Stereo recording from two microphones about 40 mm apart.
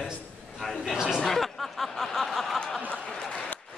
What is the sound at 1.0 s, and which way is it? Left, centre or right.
Speech, centre.